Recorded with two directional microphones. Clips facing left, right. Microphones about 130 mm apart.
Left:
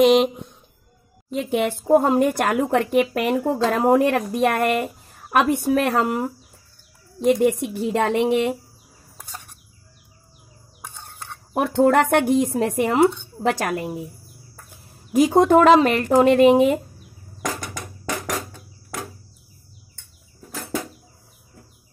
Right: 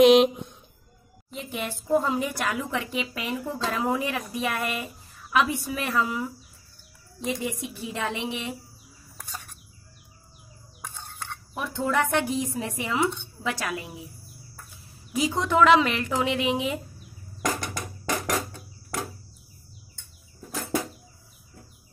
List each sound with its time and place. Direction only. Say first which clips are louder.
0.0 s speech: left 1 dB; centre (ahead or behind)
1.3 s a woman's voice: left 11 dB; 70° left (ahead or behind)
11.5 s a woman's voice: left 10 dB; 65° left (ahead or behind)